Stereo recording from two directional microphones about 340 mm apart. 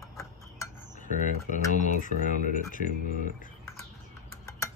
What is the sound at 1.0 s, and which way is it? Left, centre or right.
Speech, left.